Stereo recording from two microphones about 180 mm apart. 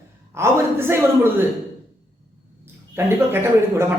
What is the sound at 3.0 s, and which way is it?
Speech, 10° right (ahead or behind).